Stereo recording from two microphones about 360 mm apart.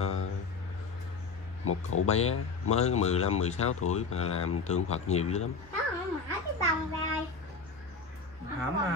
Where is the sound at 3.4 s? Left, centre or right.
Centre.